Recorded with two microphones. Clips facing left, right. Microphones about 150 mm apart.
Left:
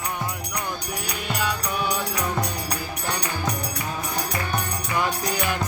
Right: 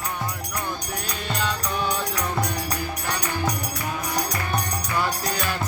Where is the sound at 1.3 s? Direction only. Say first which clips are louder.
Left 1 dB; 10° left (ahead or behind).